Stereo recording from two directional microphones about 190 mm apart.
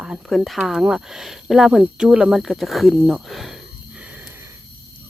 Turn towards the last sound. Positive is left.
turn(degrees=0)  # may be behind; listen again after turning